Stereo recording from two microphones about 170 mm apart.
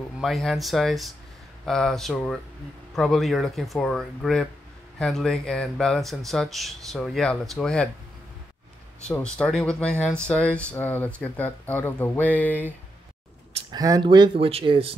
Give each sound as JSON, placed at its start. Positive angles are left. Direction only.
{"t": 0.2, "sound": "speech", "side_deg": 0}
{"t": 9.1, "sound": "speech", "side_deg": 5}
{"t": 13.7, "sound": "speech", "side_deg": -20}